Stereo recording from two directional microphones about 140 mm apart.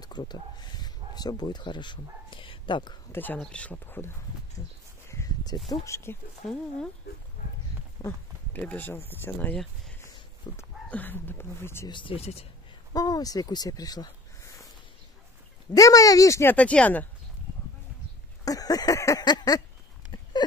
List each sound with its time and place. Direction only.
0.0 s speech: 30° left (ahead or behind)
3.1 s speech: 15° left (ahead or behind)
5.0 s a sound: 20° left (ahead or behind)
5.7 s speech: 20° left (ahead or behind)
8.0 s speech: 25° left (ahead or behind)
8.5 s speech: 10° left (ahead or behind)
10.4 s speech: 30° left (ahead or behind)
10.9 s speech: 10° left (ahead or behind)
11.9 s speech: 40° left (ahead or behind)
12.9 s speech: 25° left (ahead or behind)
15.7 s speech: 25° left (ahead or behind)
18.4 s speech: 25° left (ahead or behind)